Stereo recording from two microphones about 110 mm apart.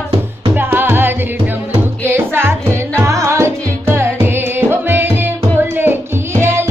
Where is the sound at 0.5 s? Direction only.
20° right (ahead or behind).